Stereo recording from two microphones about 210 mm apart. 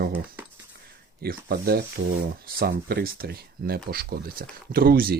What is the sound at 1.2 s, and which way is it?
Speech, 50° right (ahead or behind).